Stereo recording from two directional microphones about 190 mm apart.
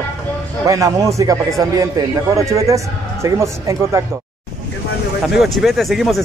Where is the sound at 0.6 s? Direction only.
15° right (ahead or behind).